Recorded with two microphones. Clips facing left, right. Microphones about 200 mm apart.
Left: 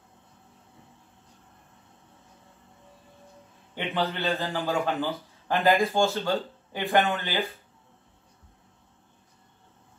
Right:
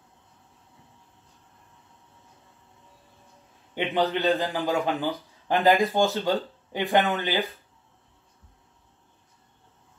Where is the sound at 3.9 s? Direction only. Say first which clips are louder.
Right 5 dB; 15° right (ahead or behind).